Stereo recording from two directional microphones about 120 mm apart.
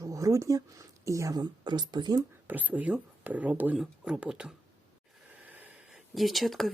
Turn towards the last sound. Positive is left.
turn(degrees=0)  # may be behind; listen again after turning